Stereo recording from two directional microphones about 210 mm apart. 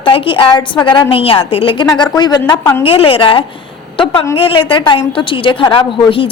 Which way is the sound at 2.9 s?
25° left (ahead or behind).